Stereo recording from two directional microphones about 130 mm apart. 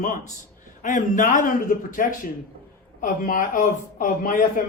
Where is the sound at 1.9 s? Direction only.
90° left.